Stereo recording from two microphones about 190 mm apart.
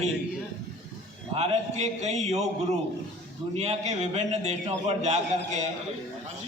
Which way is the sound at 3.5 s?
35° right (ahead or behind).